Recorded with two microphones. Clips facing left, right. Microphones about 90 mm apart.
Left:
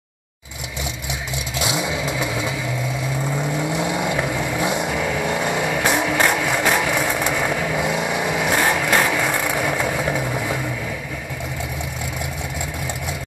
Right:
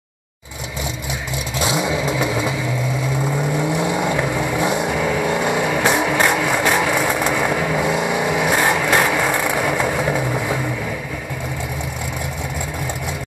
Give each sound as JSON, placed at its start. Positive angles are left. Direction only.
{"t": 1.6, "sound": "vehicle", "side_deg": -35}
{"t": 3.5, "sound": "vehicle", "side_deg": -10}
{"t": 6.1, "sound": "music", "side_deg": -5}
{"t": 7.0, "sound": "vehicle", "side_deg": -5}
{"t": 7.3, "sound": "vehicle", "side_deg": -20}
{"t": 7.8, "sound": "vehicle", "side_deg": -5}
{"t": 9.8, "sound": "vehicle", "side_deg": -15}